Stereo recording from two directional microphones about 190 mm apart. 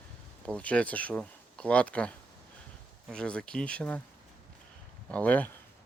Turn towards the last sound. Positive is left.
turn(degrees=10)  # may be behind; listen again after turning